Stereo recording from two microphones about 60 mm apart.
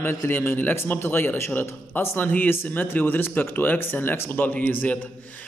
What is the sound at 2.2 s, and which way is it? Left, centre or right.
A man's voice, left.